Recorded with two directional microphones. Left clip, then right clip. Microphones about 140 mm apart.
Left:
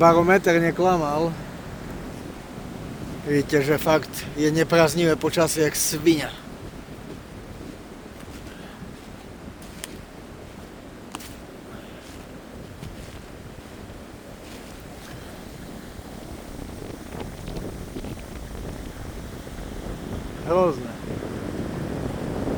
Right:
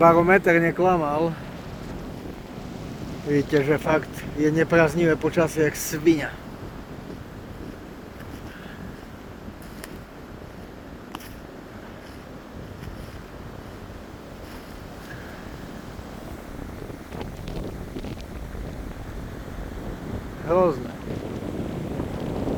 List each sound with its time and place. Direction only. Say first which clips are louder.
0.0 s speech: even; 5° right (ahead or behind)
2.8 s a sound: even; centre (ahead or behind)
3.8 s speech: left 2 dB; 50° left (ahead or behind)
20.5 s boat: even; 10° left (ahead or behind)
21.1 s boat: even; centre (ahead or behind)